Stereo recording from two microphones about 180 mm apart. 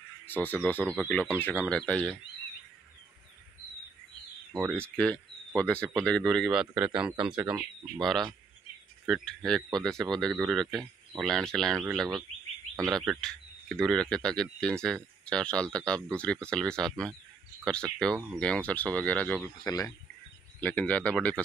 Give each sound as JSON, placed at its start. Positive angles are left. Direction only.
{"t": 0.3, "sound": "speech", "side_deg": 10}
{"t": 4.6, "sound": "speech", "side_deg": 5}
{"t": 19.6, "sound": "speech", "side_deg": 20}
{"t": 20.6, "sound": "speech", "side_deg": 10}